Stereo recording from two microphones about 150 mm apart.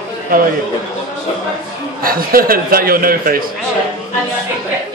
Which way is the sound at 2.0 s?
75° right (ahead or behind).